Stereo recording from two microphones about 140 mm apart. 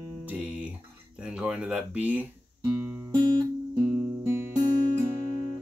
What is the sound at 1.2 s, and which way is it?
Speech, 5° right (ahead or behind).